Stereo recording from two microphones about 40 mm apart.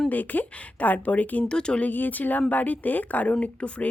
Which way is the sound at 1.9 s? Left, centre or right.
Left.